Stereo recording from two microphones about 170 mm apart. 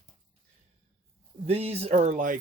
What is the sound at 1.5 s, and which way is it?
Speech, 35° right (ahead or behind).